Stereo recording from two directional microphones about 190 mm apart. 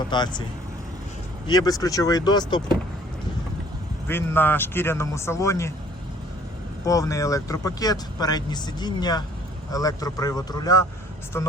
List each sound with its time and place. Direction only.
0.1 s speech: 25° left (ahead or behind)
1.5 s speech: 20° left (ahead or behind)
4.1 s speech: 10° left (ahead or behind)
6.8 s speech: 15° left (ahead or behind)